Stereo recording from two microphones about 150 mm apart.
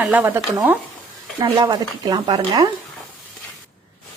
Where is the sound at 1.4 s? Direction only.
30° right (ahead or behind).